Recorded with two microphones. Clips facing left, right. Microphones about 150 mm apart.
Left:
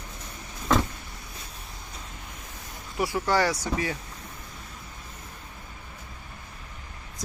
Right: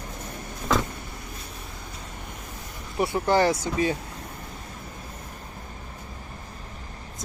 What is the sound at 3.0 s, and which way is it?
Speech, 25° right (ahead or behind).